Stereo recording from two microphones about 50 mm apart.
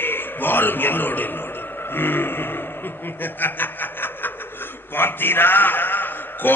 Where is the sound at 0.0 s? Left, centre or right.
Left.